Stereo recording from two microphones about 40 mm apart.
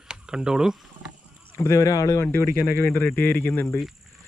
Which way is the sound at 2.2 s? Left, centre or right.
Left.